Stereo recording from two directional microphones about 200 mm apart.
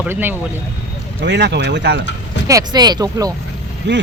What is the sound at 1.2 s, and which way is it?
Speech, 60° right (ahead or behind).